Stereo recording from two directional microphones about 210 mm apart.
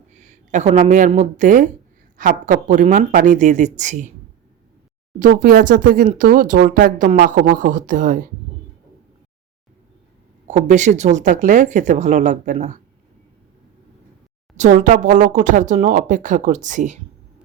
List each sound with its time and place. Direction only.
0.1 s speech: 35° right (ahead or behind)
5.2 s speech: 40° right (ahead or behind)
10.4 s speech: 35° right (ahead or behind)
14.5 s speech: 35° right (ahead or behind)